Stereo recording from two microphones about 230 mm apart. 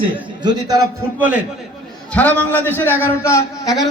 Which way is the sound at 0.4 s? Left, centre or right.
Centre.